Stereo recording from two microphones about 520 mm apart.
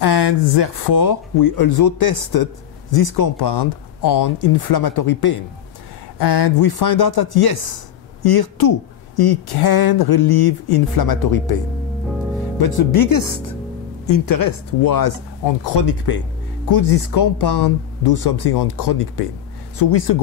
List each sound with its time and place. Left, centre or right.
0.0 s speech: left
12.5 s speech: left